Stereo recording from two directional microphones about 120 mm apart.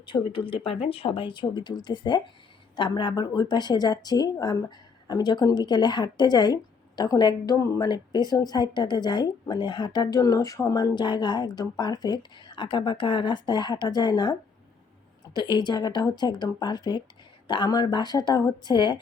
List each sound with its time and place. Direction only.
0.0 s speech: 45° left (ahead or behind)